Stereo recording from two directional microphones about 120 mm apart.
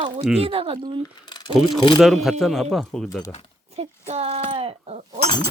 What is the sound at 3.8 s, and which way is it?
Speech, 60° right (ahead or behind).